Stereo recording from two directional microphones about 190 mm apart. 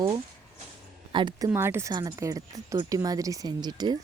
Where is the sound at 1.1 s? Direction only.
25° right (ahead or behind).